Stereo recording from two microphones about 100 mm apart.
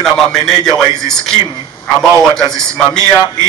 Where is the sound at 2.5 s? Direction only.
5° left (ahead or behind).